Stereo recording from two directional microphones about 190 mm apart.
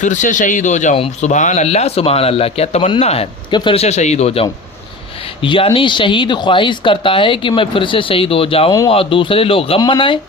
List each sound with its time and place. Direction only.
0.0 s speech: 40° left (ahead or behind); by 10.2 s 25° left (ahead or behind)